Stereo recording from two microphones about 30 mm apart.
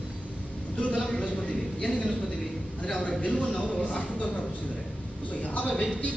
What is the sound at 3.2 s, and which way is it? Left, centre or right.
Speech, left.